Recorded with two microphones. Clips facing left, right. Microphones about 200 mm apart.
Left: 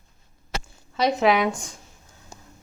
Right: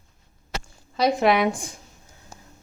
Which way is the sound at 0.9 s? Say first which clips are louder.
Right 1 dB; centre (ahead or behind).